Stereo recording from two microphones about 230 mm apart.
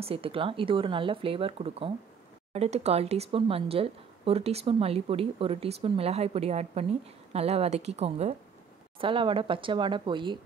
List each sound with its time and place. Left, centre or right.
0.0 s a woman's voice: right